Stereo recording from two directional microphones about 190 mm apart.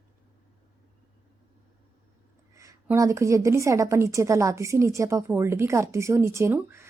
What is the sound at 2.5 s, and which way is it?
A woman's voice, 15° right (ahead or behind).